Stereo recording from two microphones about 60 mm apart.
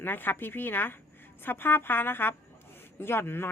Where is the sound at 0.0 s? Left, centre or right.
Left.